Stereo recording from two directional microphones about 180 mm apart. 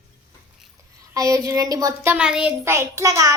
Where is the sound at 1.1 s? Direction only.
20° right (ahead or behind).